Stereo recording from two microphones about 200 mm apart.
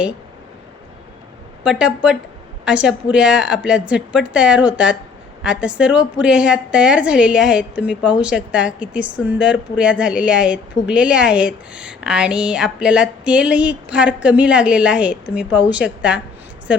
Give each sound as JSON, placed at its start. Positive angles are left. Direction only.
{"t": 1.6, "sound": "a woman's voice", "side_deg": -5}